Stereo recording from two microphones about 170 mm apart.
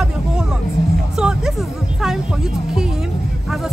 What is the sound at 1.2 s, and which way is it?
Speech, 5° right (ahead or behind).